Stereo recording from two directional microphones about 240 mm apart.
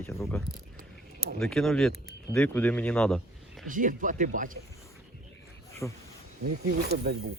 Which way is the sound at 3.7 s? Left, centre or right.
Right.